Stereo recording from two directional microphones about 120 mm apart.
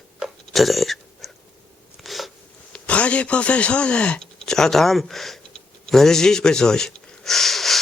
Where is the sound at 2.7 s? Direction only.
10° left (ahead or behind).